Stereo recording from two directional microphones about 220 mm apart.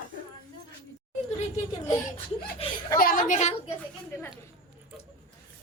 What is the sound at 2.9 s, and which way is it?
Speech, 40° left (ahead or behind).